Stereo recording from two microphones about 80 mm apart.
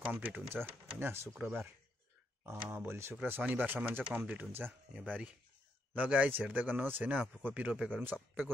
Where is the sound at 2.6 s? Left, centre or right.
Right.